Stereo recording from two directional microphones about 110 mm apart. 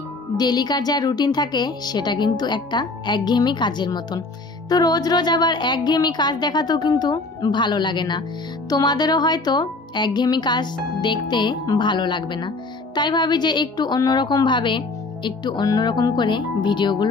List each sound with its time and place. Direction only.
0.4 s a woman's voice: 40° left (ahead or behind)